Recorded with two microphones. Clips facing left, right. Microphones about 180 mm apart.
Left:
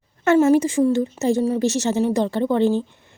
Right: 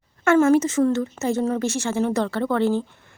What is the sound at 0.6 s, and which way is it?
A woman's voice, 15° left (ahead or behind).